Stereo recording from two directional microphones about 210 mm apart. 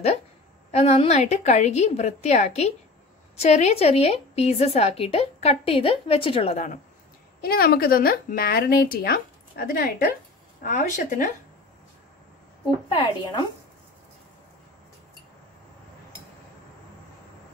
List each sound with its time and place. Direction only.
0.7 s a woman's voice: 30° left (ahead or behind)
7.4 s a woman's voice: 45° left (ahead or behind)
12.9 s a woman's voice: 20° left (ahead or behind)